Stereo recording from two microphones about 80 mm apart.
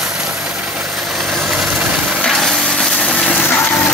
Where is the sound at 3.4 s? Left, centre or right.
Left.